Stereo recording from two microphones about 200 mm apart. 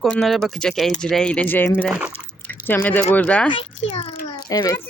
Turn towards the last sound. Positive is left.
turn(degrees=15)  # may be behind; listen again after turning